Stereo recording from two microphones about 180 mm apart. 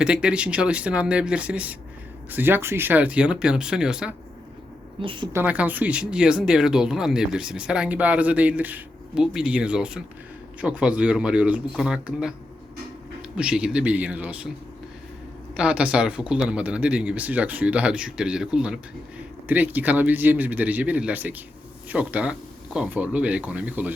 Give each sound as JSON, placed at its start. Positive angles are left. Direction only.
{"t": 0.0, "sound": "speech", "side_deg": -5}
{"t": 5.0, "sound": "a woman's voice", "side_deg": -25}
{"t": 5.3, "sound": "speech", "side_deg": -10}
{"t": 13.3, "sound": "speech", "side_deg": -5}
{"t": 15.5, "sound": "speech", "side_deg": -5}